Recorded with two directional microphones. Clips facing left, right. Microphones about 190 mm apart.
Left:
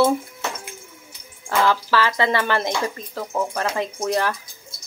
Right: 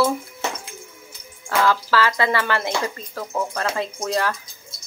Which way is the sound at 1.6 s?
20° left (ahead or behind).